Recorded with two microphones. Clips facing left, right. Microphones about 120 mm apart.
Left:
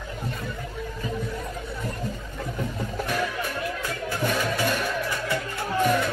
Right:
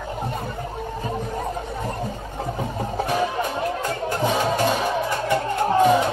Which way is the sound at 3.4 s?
45° right (ahead or behind).